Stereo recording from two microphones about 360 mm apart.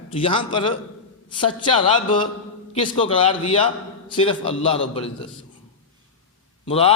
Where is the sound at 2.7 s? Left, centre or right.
Centre.